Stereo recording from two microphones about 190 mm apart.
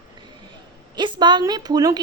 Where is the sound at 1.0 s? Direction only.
25° right (ahead or behind).